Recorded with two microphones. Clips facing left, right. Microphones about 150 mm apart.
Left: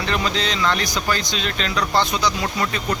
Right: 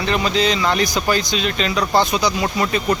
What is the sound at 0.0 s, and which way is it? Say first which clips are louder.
Speech: right 5 dB; 5° right (ahead or behind).